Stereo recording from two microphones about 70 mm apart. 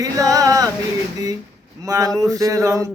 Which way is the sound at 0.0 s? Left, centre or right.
Right.